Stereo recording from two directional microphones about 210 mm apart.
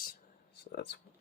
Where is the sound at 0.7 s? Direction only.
55° left (ahead or behind).